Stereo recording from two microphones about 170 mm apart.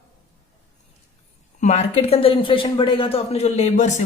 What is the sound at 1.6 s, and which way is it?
Speech, 40° left (ahead or behind).